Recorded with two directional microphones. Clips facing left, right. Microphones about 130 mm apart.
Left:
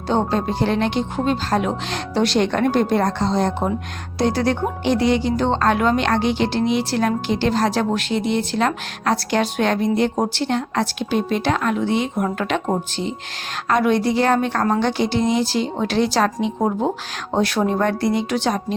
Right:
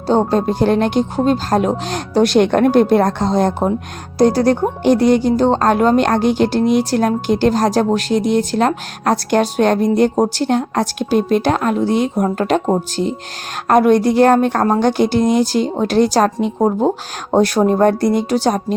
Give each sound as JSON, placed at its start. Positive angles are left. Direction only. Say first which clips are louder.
{"t": 0.1, "sound": "speech", "louder": "right 5 dB", "side_deg": -40}